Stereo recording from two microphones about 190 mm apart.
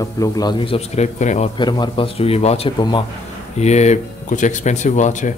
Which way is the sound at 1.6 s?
25° left (ahead or behind).